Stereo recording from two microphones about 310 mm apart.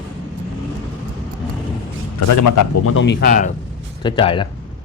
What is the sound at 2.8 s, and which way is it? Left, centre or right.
Speech, left.